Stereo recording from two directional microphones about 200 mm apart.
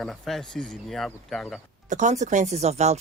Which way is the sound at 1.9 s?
35° right (ahead or behind).